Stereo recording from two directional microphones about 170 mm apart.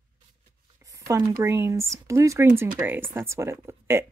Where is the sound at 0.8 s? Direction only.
20° right (ahead or behind).